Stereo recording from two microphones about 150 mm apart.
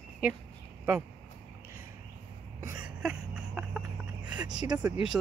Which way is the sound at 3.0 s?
5° right (ahead or behind).